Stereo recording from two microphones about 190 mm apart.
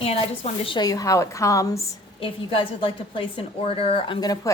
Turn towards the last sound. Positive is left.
turn(degrees=20)  # may be behind; listen again after turning